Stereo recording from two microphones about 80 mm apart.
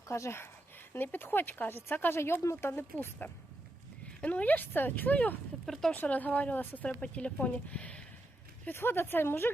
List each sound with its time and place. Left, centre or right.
0.1 s speech: left
5.6 s speech: centre
5.9 s speech: centre
8.6 s speech: left